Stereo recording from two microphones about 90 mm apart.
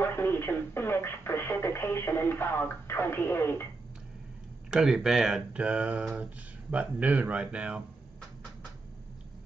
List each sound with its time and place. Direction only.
0.0 s speech: 25° left (ahead or behind)
4.6 s speech: 5° right (ahead or behind)